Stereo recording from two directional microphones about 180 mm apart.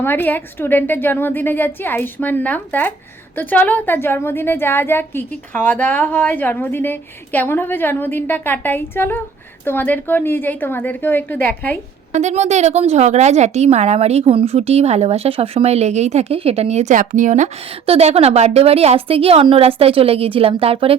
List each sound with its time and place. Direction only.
0.0 s a woman's voice: 10° left (ahead or behind)
12.1 s a woman's voice: 40° right (ahead or behind)